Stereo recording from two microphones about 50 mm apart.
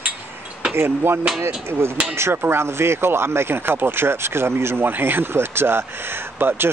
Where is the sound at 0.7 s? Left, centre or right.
Right.